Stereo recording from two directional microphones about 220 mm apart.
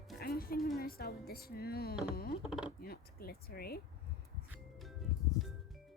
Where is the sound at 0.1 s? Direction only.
40° left (ahead or behind).